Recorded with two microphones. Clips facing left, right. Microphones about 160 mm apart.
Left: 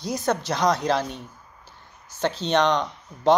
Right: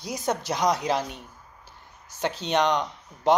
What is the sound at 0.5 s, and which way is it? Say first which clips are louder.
Speech: left 2 dB; 10° right (ahead or behind).